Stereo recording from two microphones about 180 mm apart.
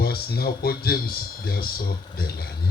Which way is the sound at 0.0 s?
60° left (ahead or behind).